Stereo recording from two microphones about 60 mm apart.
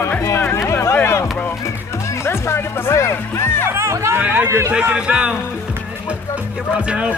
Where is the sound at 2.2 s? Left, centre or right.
Left.